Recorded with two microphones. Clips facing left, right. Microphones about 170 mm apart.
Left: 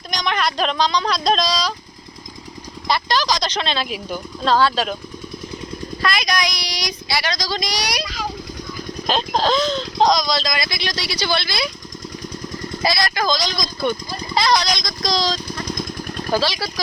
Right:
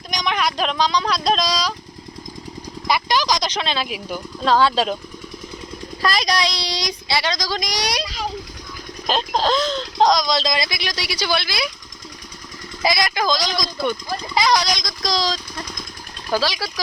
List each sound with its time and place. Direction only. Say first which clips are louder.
0.1 s speech: even; 10° right (ahead or behind)
2.8 s speech: even; 15° right (ahead or behind)
6.1 s speech: right 2 dB; 35° right (ahead or behind)
9.0 s speech: left 1 dB; 5° right (ahead or behind)
10.2 s speech: right 1 dB; 20° right (ahead or behind)
10.4 s speech: right 2 dB; 30° right (ahead or behind)
10.7 s speech: left 1 dB; 10° right (ahead or behind)
12.8 s speech: right 1 dB; 20° right (ahead or behind)